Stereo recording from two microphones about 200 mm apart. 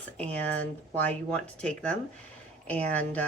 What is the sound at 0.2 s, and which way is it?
Speech, 5° left (ahead or behind).